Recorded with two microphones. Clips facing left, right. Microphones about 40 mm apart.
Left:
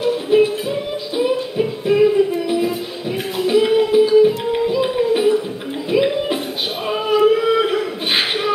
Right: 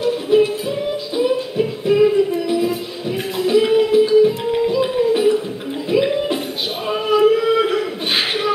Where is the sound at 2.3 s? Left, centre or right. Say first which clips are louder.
Even; centre.